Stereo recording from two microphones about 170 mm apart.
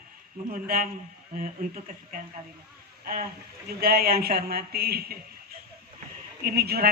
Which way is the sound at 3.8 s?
65° right (ahead or behind).